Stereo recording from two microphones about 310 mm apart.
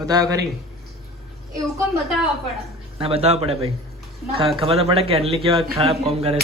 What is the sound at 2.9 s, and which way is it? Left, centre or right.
A man's voice, centre.